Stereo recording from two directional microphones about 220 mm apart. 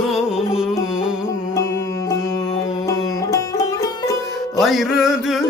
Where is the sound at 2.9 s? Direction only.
15° left (ahead or behind).